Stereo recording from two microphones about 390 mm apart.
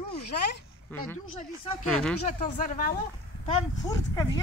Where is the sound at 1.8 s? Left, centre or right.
Centre.